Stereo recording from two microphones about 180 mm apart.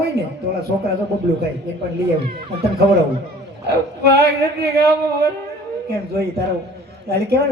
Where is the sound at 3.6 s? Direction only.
65° right (ahead or behind).